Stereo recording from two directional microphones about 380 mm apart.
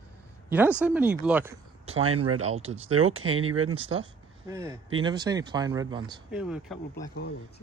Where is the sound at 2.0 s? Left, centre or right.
Right.